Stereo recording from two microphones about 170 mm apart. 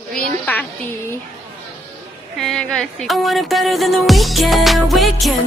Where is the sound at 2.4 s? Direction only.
Centre (ahead or behind).